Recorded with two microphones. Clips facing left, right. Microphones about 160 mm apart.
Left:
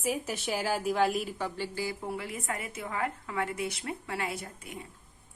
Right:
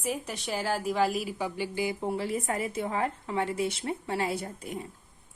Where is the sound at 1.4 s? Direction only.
15° right (ahead or behind); by 4.8 s 35° right (ahead or behind).